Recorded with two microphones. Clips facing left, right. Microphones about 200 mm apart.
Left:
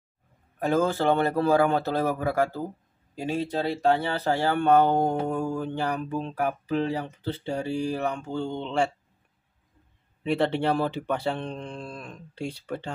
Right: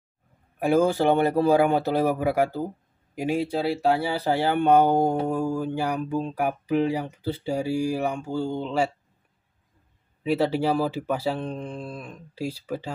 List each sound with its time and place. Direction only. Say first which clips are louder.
0.6 s speech: right 3 dB; 10° right (ahead or behind)
10.2 s speech: right 1 dB; 5° right (ahead or behind)